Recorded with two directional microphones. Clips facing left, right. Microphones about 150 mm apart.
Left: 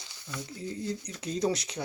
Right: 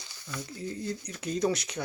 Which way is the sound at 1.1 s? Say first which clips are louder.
Right 1 dB; 30° left (ahead or behind).